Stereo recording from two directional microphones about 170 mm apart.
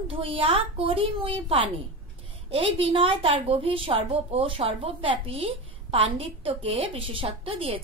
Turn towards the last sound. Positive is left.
turn(degrees=-30)  # may be behind; listen again after turning